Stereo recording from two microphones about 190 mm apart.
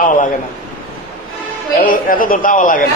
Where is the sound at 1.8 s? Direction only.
45° left (ahead or behind).